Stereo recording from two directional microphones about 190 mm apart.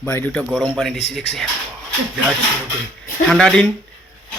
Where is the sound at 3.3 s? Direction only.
Centre (ahead or behind).